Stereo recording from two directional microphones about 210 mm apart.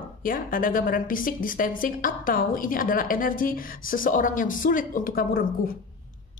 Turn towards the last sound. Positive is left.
turn(degrees=45)  # may be behind; listen again after turning